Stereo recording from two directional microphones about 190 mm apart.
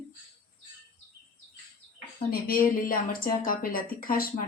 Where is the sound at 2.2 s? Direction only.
50° left (ahead or behind).